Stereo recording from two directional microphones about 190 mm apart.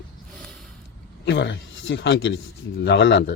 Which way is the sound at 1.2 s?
65° left (ahead or behind).